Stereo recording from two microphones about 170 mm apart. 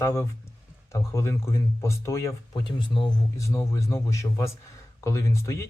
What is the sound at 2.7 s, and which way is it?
Speech, 30° left (ahead or behind).